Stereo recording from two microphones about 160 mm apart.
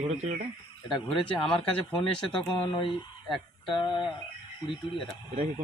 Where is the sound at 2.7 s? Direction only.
30° left (ahead or behind).